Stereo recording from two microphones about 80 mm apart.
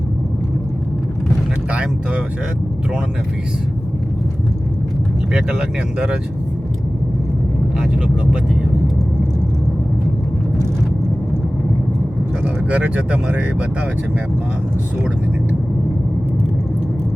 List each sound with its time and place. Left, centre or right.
1.7 s speech: centre
5.3 s speech: centre
7.8 s speech: centre
12.7 s speech: centre